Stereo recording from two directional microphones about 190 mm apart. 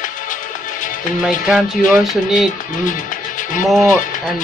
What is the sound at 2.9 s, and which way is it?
Music, 45° left (ahead or behind).